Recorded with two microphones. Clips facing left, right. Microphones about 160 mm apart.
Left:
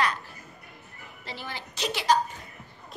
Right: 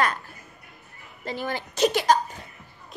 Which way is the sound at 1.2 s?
50° right (ahead or behind).